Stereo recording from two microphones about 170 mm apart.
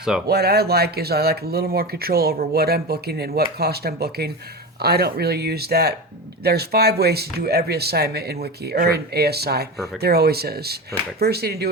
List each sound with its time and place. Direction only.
0.3 s speech: 70° right (ahead or behind)
9.7 s speech: centre (ahead or behind)
10.0 s speech: 70° right (ahead or behind)